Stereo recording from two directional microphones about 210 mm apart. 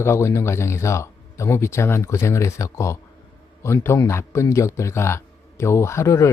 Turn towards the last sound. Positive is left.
turn(degrees=15)  # may be behind; listen again after turning